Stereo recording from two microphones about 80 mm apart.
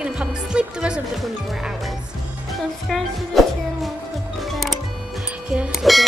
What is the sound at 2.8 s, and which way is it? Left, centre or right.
Music, centre.